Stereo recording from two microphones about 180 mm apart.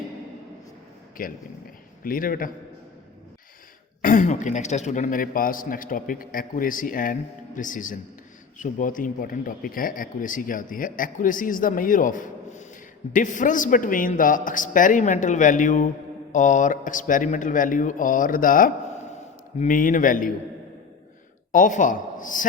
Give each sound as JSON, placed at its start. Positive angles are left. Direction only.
{"t": 1.2, "sound": "speech", "side_deg": 50}
{"t": 4.0, "sound": "speech", "side_deg": 45}
{"t": 21.5, "sound": "speech", "side_deg": 45}